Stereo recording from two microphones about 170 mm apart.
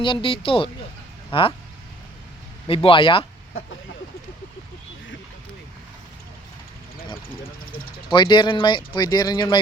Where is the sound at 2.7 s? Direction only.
30° left (ahead or behind).